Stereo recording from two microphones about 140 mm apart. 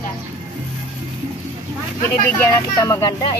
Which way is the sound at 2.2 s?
20° left (ahead or behind).